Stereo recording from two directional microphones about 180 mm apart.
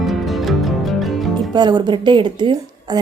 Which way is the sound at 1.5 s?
25° right (ahead or behind).